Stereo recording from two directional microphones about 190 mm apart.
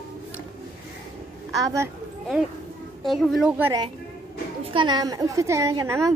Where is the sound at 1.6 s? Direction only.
15° right (ahead or behind).